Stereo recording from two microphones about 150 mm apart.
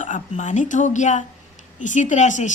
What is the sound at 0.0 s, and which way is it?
A woman's voice, 55° left (ahead or behind).